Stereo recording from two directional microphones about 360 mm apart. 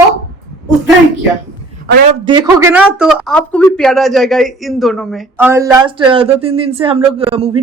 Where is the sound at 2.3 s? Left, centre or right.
Centre.